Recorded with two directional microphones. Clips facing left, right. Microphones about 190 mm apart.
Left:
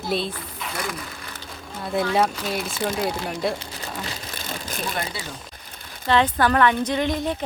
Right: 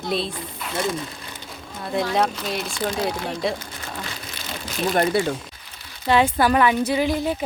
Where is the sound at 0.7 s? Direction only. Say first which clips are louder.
Right 6 dB; 25° right (ahead or behind).